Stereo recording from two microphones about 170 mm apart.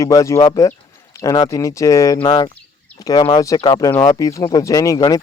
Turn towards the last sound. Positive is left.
turn(degrees=20)  # may be behind; listen again after turning